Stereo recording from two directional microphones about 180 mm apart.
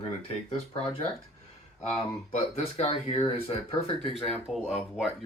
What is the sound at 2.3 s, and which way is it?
Speech, 35° left (ahead or behind).